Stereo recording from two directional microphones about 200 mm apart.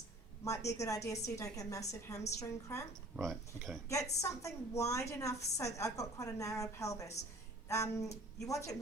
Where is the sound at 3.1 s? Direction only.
Centre (ahead or behind).